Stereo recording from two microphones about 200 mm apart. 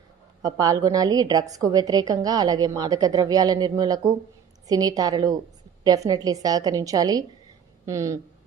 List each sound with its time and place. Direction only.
0.4 s a woman's voice: 20° right (ahead or behind)